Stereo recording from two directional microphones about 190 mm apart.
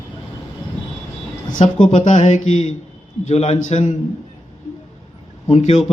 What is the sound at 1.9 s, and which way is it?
A man's voice, 40° left (ahead or behind).